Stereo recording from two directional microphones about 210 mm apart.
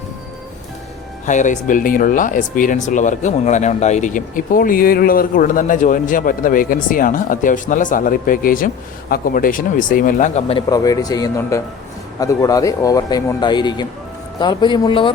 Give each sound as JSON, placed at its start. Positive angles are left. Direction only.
{"t": 1.3, "sound": "speech", "side_deg": 35}
{"t": 10.7, "sound": "speech", "side_deg": 15}